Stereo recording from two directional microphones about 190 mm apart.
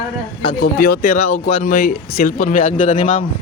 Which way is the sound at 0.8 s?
45° left (ahead or behind).